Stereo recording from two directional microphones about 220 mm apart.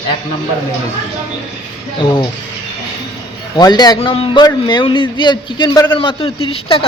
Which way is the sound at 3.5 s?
20° left (ahead or behind).